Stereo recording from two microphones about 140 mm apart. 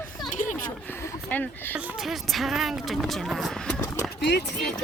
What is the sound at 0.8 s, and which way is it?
Speech, 20° left (ahead or behind).